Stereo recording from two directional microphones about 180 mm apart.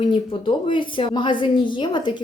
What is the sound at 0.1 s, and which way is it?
Speech, 25° left (ahead or behind).